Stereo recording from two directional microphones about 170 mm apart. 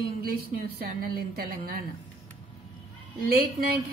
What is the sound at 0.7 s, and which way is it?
Speech, 60° right (ahead or behind).